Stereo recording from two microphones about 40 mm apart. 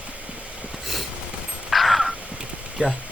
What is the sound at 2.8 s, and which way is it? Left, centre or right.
Speech, right.